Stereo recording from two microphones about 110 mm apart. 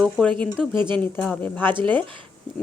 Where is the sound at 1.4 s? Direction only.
15° left (ahead or behind).